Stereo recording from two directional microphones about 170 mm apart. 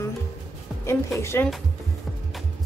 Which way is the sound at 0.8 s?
15° left (ahead or behind).